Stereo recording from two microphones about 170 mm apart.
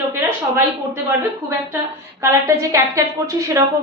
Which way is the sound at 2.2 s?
15° right (ahead or behind).